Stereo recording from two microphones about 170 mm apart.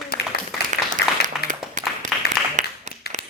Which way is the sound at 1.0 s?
70° left (ahead or behind).